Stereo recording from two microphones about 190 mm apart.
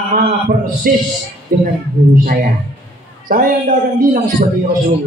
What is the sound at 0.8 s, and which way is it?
Speech, 50° right (ahead or behind).